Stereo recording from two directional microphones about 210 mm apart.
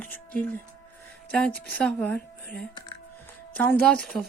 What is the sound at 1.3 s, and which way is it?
Speech, 5° left (ahead or behind).